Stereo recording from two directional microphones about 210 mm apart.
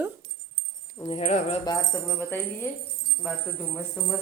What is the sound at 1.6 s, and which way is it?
Speech, 15° left (ahead or behind).